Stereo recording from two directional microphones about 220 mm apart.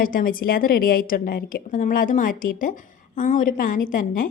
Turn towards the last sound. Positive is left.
turn(degrees=40)  # may be behind; listen again after turning